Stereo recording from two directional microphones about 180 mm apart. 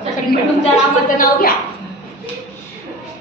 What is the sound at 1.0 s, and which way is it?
Speech, 50° left (ahead or behind).